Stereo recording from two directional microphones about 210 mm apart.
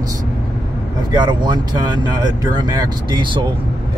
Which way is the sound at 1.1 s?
20° right (ahead or behind).